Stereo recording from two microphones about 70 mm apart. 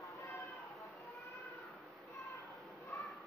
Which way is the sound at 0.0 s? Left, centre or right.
Left.